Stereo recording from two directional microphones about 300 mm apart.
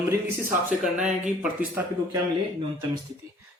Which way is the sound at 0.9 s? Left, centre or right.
Right.